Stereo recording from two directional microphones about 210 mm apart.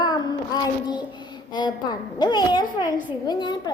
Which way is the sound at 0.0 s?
20° left (ahead or behind).